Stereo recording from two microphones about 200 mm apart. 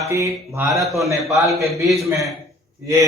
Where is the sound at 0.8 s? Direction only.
Centre (ahead or behind).